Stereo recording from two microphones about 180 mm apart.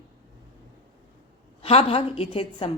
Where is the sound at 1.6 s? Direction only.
35° left (ahead or behind).